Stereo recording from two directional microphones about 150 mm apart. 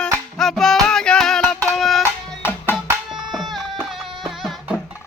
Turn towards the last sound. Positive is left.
turn(degrees=0)  # may be behind; listen again after turning